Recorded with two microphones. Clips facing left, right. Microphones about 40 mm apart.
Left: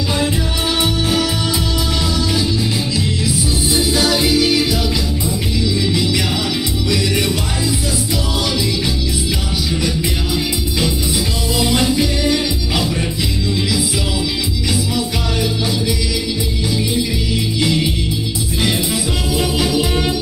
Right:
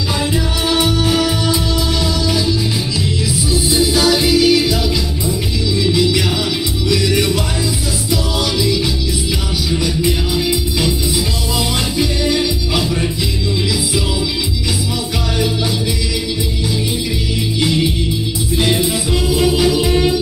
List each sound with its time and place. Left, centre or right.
4.4 s music: left
12.2 s music: centre
19.3 s music: right